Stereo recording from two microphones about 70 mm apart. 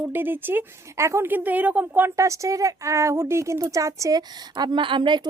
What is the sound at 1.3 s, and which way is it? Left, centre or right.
Speech, right.